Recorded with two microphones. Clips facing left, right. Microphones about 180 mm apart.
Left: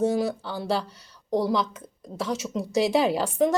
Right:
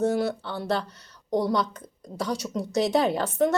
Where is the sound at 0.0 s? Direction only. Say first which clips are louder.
Even; 10° left (ahead or behind).